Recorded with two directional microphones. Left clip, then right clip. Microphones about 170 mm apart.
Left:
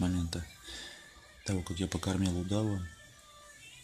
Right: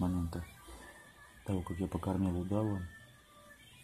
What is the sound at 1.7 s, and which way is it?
Speech, 15° left (ahead or behind).